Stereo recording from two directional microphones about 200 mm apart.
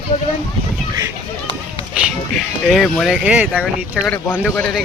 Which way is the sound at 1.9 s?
Centre (ahead or behind).